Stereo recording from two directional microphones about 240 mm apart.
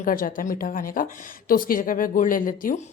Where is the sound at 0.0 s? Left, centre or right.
Left.